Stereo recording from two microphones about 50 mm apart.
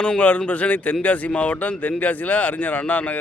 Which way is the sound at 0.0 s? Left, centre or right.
Left.